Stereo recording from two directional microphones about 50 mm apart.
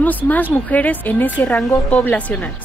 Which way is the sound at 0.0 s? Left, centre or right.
Left.